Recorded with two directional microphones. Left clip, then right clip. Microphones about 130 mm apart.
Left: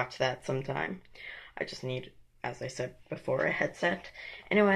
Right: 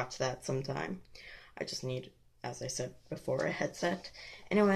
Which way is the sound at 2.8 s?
40° right (ahead or behind).